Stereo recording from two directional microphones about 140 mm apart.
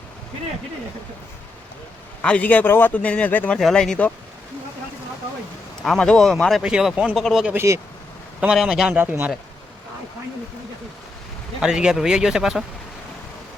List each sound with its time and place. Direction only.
2.2 s a man's voice: 10° left (ahead or behind)
5.8 s a man's voice: 5° left (ahead or behind)
7.5 s speech: 20° right (ahead or behind)
8.4 s a man's voice: 5° right (ahead or behind)
9.0 s speech: 15° right (ahead or behind)
11.6 s a man's voice: 5° right (ahead or behind)